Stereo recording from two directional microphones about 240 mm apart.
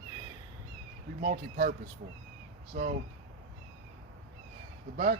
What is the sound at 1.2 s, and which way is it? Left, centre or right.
Speech, right.